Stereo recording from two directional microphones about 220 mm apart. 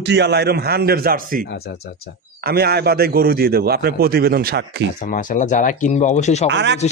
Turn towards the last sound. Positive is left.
turn(degrees=-55)  # may be behind; listen again after turning